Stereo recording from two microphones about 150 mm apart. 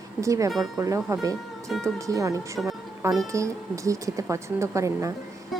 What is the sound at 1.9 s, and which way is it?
A woman's voice, 20° right (ahead or behind).